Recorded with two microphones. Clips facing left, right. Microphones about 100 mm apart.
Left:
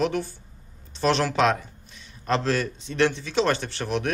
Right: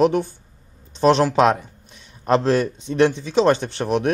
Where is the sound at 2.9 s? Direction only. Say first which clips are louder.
Right 6 dB; 15° right (ahead or behind).